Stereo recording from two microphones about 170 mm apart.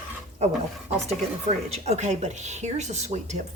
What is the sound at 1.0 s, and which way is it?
A woman's voice, 40° right (ahead or behind).